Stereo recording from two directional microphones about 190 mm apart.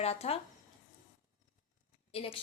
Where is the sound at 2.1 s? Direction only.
30° left (ahead or behind).